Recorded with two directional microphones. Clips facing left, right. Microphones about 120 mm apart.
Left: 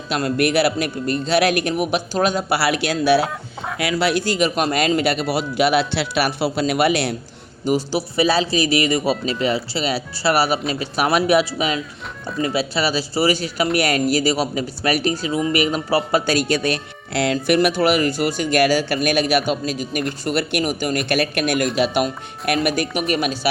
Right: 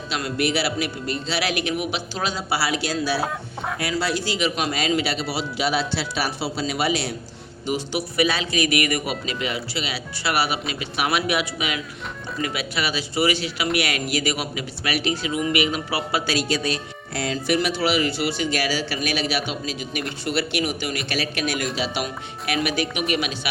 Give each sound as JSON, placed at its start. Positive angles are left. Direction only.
{"t": 0.1, "sound": "a man's voice", "side_deg": 50}
{"t": 3.8, "sound": "a man's voice", "side_deg": 75}
{"t": 7.6, "sound": "a man's voice", "side_deg": 40}